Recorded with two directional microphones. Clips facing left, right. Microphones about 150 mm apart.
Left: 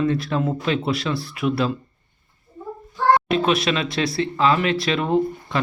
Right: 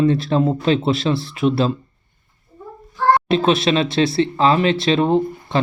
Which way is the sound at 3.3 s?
25° right (ahead or behind).